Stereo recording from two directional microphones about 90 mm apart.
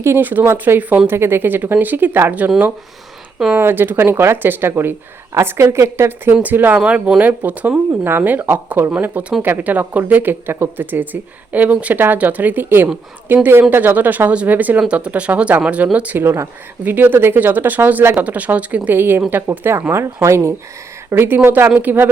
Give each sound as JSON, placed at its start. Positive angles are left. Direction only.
{"t": 0.0, "sound": "speech", "side_deg": -25}
{"t": 3.5, "sound": "speech", "side_deg": -25}
{"t": 16.1, "sound": "speech", "side_deg": -30}
{"t": 16.8, "sound": "speech", "side_deg": -20}